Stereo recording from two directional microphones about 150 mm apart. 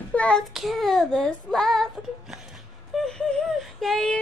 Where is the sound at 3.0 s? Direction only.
5° left (ahead or behind).